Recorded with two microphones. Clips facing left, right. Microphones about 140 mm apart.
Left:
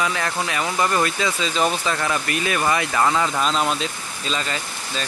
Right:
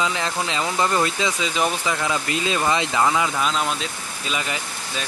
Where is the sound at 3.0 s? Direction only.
5° right (ahead or behind).